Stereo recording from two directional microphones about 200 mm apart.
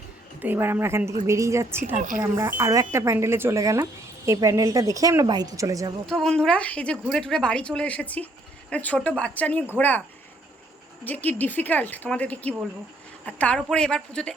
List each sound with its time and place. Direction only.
0.4 s speech: 10° right (ahead or behind)
6.1 s a woman's voice: centre (ahead or behind)
11.0 s a woman's voice: 10° left (ahead or behind)